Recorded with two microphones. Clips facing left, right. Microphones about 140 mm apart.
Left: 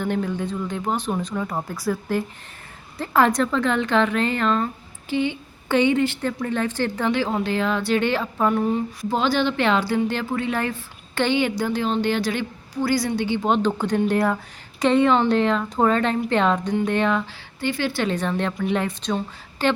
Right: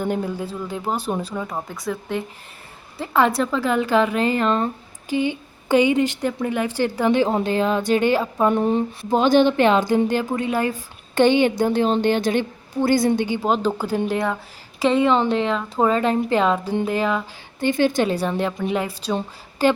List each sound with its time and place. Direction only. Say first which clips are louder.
0.0 s a woman's voice: even; 10° right (ahead or behind)
4.4 s speech: right 1 dB; 25° right (ahead or behind)
5.1 s a sound: right 1 dB; 20° left (ahead or behind)
5.6 s a woman's voice: right 2 dB; 15° right (ahead or behind)
8.4 s a woman's voice: right 2 dB; 25° right (ahead or behind); by 17.2 s 5° right (ahead or behind)
17.6 s a woman's voice: right 5 dB; 20° right (ahead or behind)